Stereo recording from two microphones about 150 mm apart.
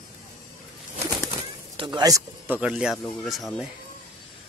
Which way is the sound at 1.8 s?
30° right (ahead or behind).